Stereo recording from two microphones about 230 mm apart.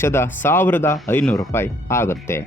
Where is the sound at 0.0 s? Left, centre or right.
Centre.